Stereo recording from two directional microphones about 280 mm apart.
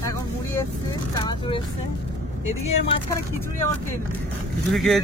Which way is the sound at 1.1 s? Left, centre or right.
Centre.